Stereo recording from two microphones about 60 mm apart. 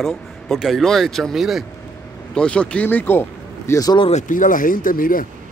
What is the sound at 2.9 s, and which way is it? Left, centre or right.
Speech, left.